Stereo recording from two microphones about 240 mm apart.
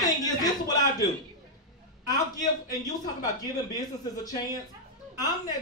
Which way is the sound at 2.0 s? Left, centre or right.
Centre.